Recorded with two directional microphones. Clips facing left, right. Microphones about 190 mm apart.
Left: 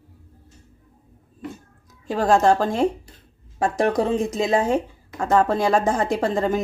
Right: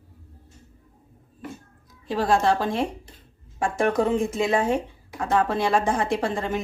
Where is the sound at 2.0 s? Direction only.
45° left (ahead or behind).